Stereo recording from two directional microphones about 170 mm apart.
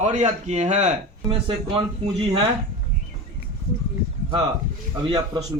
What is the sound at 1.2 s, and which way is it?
Speech, 30° right (ahead or behind).